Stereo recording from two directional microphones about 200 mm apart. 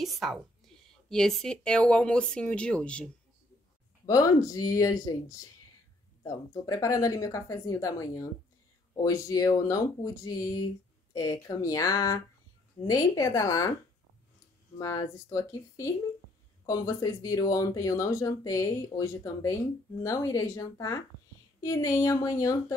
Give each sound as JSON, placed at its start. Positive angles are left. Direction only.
{"t": 0.0, "sound": "speech", "side_deg": 0}
{"t": 4.0, "sound": "speech", "side_deg": 15}
{"t": 14.8, "sound": "speech", "side_deg": 15}